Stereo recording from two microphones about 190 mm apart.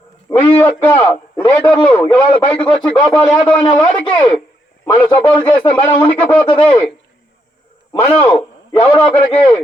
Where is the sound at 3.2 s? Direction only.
5° left (ahead or behind).